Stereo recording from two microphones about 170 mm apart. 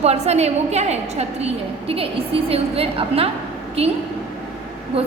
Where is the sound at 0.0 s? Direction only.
40° right (ahead or behind).